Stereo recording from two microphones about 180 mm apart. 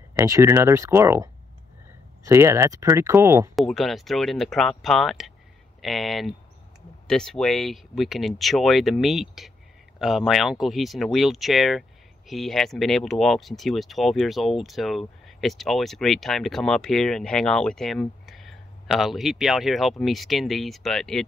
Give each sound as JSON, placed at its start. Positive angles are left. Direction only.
{"t": 0.1, "sound": "speech", "side_deg": -15}
{"t": 3.5, "sound": "speech", "side_deg": 0}